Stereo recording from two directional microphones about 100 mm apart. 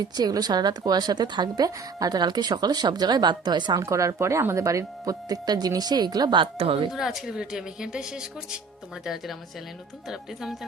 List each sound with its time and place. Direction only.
0.0 s a woman's voice: 40° right (ahead or behind)
3.8 s speech: 30° right (ahead or behind); by 6.8 s 65° right (ahead or behind)
6.9 s a woman's voice: 5° right (ahead or behind)
10.1 s speech: 5° right (ahead or behind)